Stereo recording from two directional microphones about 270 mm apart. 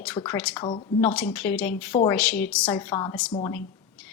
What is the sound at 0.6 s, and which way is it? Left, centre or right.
Speech, centre.